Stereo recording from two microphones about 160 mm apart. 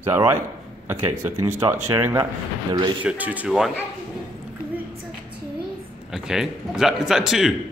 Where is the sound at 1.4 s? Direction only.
15° right (ahead or behind).